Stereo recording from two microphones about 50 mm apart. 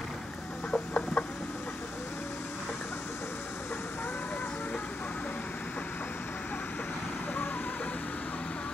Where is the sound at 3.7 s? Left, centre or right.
Left.